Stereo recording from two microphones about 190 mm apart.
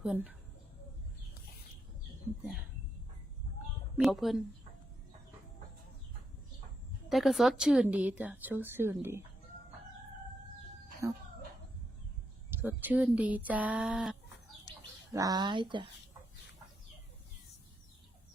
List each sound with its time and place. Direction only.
0.0 s speech: 5° right (ahead or behind)
4.0 s speech: centre (ahead or behind)
7.1 s speech: centre (ahead or behind)
11.0 s speech: 15° right (ahead or behind)
12.5 s speech: 10° right (ahead or behind)
15.1 s speech: 20° right (ahead or behind)